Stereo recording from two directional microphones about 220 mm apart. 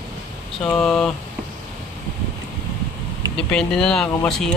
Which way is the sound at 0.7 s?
Centre (ahead or behind).